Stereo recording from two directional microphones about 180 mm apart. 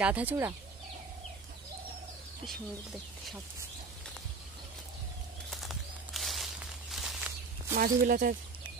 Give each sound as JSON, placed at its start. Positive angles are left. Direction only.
{"t": 0.0, "sound": "speech", "side_deg": -10}
{"t": 2.4, "sound": "speech", "side_deg": 0}
{"t": 5.5, "sound": "walk", "side_deg": 0}
{"t": 7.7, "sound": "speech", "side_deg": -50}